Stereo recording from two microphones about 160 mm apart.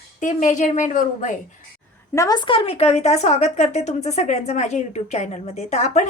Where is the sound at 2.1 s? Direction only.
20° left (ahead or behind); by 6.0 s 45° left (ahead or behind).